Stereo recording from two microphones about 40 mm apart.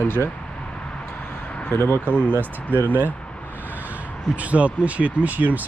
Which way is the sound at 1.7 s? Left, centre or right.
Left.